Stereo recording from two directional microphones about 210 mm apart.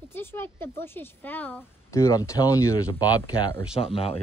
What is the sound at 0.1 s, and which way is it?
Speech, 10° left (ahead or behind).